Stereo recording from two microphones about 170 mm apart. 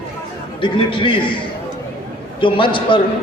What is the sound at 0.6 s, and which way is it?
Speech, 30° left (ahead or behind).